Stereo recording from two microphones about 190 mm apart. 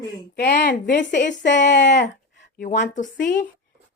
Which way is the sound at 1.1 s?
40° left (ahead or behind).